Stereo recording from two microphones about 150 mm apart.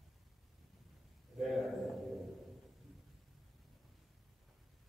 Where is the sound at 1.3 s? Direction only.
Centre (ahead or behind).